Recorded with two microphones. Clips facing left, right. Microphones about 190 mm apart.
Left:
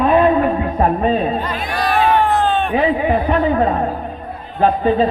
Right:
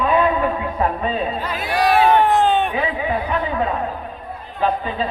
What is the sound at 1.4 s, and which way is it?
Music, 10° right (ahead or behind).